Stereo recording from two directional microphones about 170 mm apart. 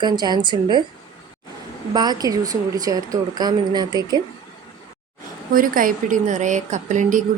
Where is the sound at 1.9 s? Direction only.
25° right (ahead or behind).